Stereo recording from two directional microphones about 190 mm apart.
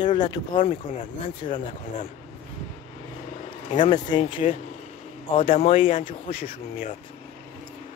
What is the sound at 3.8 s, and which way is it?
Speech, 25° left (ahead or behind).